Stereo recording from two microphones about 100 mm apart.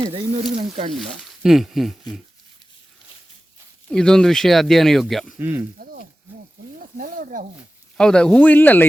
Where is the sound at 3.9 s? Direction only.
5° left (ahead or behind).